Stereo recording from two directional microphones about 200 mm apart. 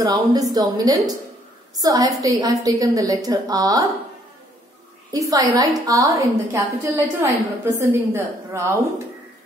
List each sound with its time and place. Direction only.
0.0 s a woman's voice: 20° right (ahead or behind)
5.1 s a woman's voice: 15° right (ahead or behind)